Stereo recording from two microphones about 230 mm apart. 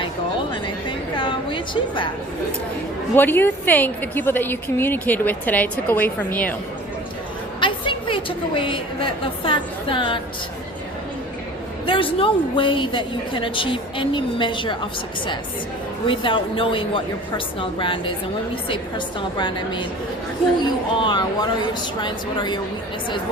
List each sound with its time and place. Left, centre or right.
0.5 s music: left
3.2 s a woman's voice: centre
7.6 s a woman's voice: left
11.9 s a woman's voice: left
16.0 s a woman's voice: left